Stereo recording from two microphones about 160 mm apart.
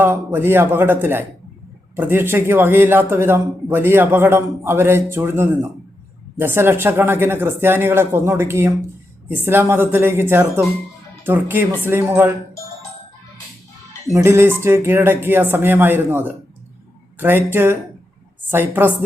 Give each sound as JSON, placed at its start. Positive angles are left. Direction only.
{"t": 0.0, "sound": "a man's voice", "side_deg": -15}
{"t": 14.1, "sound": "a man's voice", "side_deg": -15}